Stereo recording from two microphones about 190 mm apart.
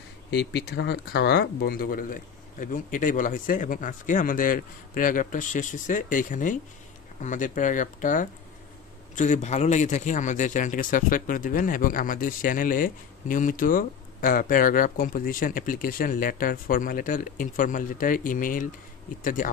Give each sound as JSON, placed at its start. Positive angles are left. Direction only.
{"t": 0.3, "sound": "a man's voice", "side_deg": 65}